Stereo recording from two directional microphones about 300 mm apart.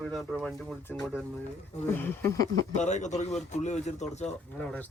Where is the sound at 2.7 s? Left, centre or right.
Left.